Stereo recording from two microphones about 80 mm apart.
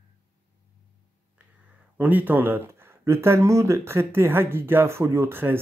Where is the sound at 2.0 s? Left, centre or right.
Right.